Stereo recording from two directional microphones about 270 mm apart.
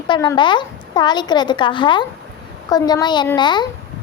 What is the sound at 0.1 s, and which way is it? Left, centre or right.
A woman's voice, centre.